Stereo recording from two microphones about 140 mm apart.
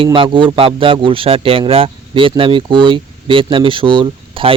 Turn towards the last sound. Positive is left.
turn(degrees=-35)  # may be behind; listen again after turning